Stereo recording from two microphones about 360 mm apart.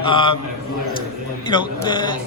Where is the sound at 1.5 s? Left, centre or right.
Centre.